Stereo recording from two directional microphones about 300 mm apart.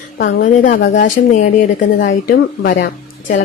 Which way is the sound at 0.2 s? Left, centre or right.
Left.